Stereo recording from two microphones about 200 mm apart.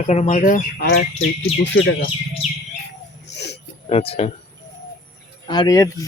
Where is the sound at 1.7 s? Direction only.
60° left (ahead or behind).